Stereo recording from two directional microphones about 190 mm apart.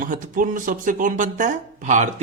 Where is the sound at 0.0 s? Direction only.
45° right (ahead or behind).